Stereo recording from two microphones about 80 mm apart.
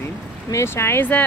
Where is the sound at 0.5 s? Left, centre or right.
Left.